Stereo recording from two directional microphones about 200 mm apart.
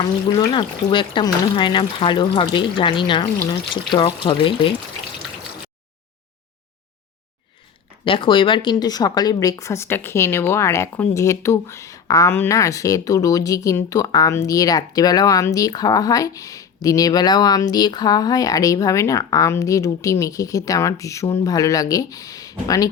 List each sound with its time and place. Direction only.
0.3 s speech: 25° left (ahead or behind)
8.0 s speech: 25° left (ahead or behind)